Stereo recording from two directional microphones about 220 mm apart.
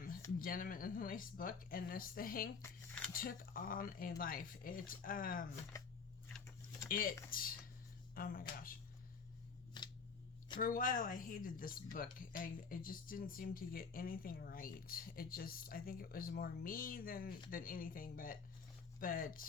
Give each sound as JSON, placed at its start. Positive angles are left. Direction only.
{"t": 0.3, "sound": "speech", "side_deg": 40}
{"t": 6.8, "sound": "speech", "side_deg": 40}
{"t": 9.8, "sound": "scissors", "side_deg": 20}
{"t": 10.6, "sound": "speech", "side_deg": 40}